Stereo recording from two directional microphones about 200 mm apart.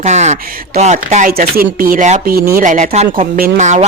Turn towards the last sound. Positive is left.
turn(degrees=-35)  # may be behind; listen again after turning